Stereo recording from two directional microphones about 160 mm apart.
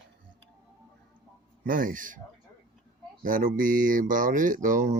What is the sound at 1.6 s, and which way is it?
Speech, 60° right (ahead or behind).